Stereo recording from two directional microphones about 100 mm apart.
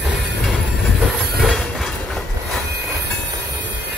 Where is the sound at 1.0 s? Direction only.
5° right (ahead or behind).